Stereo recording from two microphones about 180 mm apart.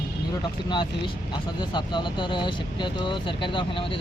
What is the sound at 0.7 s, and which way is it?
Speech, 25° left (ahead or behind).